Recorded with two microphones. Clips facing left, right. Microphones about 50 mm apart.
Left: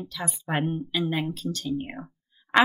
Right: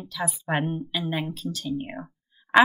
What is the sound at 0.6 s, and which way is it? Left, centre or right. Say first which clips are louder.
Speech: left 1 dB; centre.